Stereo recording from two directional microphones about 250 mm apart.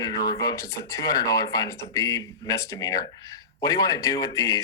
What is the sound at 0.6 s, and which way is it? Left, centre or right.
Speech, left.